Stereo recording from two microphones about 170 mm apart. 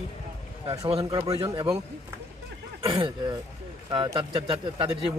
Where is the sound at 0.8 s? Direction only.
35° right (ahead or behind).